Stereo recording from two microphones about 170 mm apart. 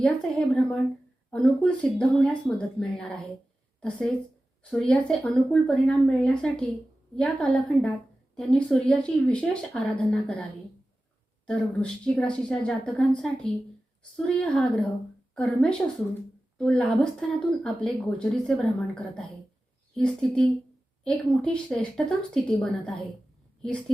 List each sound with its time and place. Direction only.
0.0 s a woman's voice: 5° left (ahead or behind)
11.4 s speech: 5° left (ahead or behind)
19.9 s speech: 5° left (ahead or behind)